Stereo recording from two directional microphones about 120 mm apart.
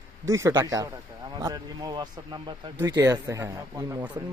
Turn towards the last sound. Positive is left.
turn(degrees=-25)  # may be behind; listen again after turning